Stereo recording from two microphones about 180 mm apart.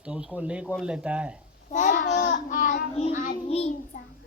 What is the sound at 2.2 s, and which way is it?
A child's voice, 45° left (ahead or behind).